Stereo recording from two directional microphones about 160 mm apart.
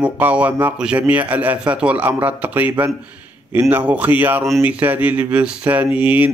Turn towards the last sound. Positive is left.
turn(degrees=-10)  # may be behind; listen again after turning